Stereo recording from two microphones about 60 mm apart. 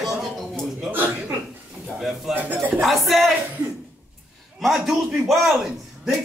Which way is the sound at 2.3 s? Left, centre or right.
Right.